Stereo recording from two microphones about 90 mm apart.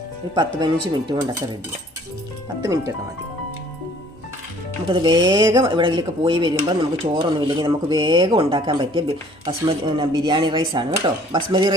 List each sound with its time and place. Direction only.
0.3 s speech: 50° right (ahead or behind)
4.9 s speech: 65° right (ahead or behind); by 5.5 s 50° right (ahead or behind)
5.6 s speech: 65° right (ahead or behind); by 8.7 s 85° right
8.7 s speech: 75° right (ahead or behind)